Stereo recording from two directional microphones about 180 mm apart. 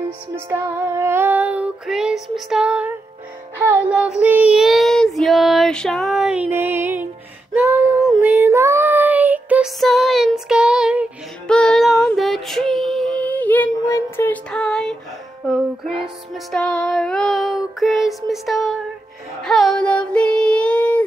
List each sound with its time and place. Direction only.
0.5 s female singing: 15° right (ahead or behind)
3.5 s child singing: 10° right (ahead or behind)
7.5 s a sound: 15° right (ahead or behind)
8.2 s child singing: 10° right (ahead or behind)
15.4 s music: centre (ahead or behind)
16.5 s child singing: 5° left (ahead or behind)
19.4 s a sound: centre (ahead or behind)